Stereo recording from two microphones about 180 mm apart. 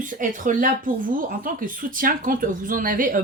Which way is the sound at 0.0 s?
45° right (ahead or behind).